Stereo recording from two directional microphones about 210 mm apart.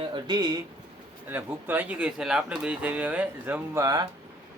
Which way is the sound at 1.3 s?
10° right (ahead or behind).